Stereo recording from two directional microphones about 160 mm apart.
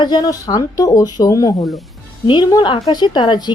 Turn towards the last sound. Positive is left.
turn(degrees=30)  # may be behind; listen again after turning